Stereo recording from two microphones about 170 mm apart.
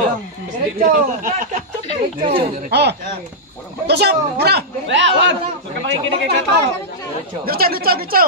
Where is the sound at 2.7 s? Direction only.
75° right (ahead or behind).